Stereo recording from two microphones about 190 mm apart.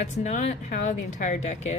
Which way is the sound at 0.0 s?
40° left (ahead or behind).